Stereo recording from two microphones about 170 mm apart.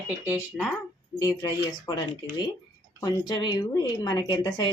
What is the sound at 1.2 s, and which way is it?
A woman's voice, 20° left (ahead or behind).